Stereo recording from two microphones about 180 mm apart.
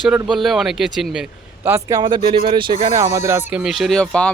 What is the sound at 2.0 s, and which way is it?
Speech, 25° right (ahead or behind).